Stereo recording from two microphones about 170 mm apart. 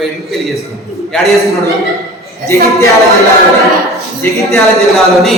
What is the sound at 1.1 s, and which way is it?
Speech, centre (ahead or behind).